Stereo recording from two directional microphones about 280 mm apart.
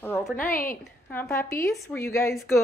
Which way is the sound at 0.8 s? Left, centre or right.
Centre.